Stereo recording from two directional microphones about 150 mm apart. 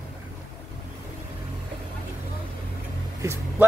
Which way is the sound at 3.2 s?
20° right (ahead or behind).